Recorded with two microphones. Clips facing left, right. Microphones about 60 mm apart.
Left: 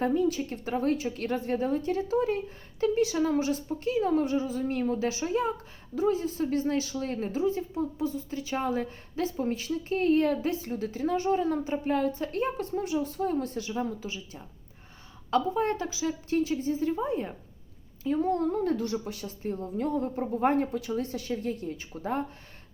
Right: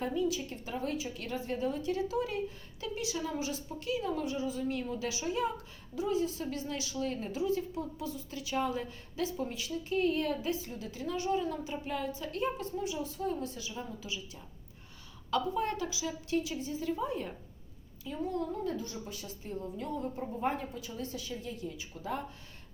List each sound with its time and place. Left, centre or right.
0.0 s speech: left
18.0 s a woman's voice: left
19.4 s a woman's voice: left